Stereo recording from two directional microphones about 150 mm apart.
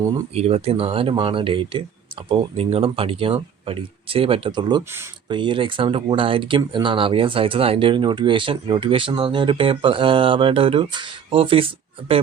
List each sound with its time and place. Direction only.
0.3 s speech: 45° right (ahead or behind)